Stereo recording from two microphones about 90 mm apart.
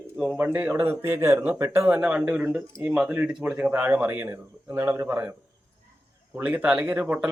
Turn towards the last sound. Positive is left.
turn(degrees=-10)  # may be behind; listen again after turning